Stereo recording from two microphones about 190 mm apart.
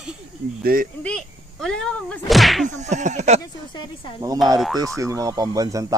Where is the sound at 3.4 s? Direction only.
25° left (ahead or behind).